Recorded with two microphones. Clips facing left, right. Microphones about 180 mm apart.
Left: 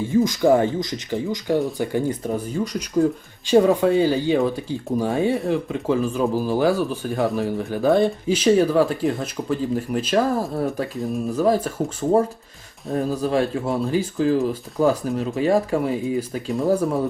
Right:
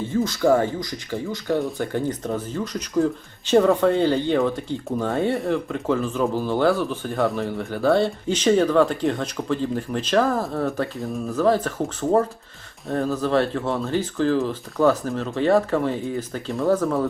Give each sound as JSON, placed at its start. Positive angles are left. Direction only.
{"t": 0.1, "sound": "speech", "side_deg": 15}